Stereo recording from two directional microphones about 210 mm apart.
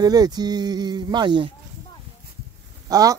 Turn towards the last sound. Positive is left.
turn(degrees=-15)  # may be behind; listen again after turning